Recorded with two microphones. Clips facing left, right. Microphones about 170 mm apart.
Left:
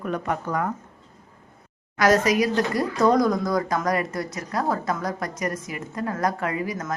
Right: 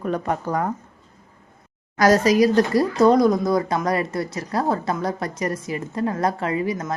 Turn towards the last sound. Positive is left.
turn(degrees=-25)  # may be behind; listen again after turning